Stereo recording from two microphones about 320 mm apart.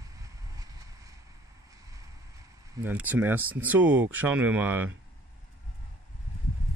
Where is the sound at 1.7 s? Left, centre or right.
Centre.